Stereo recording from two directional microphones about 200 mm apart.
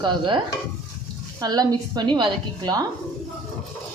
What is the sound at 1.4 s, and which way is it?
A woman's voice, 20° right (ahead or behind).